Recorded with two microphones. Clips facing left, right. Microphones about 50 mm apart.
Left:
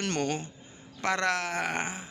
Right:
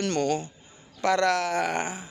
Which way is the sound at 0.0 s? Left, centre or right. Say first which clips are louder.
Right 5 dB; left.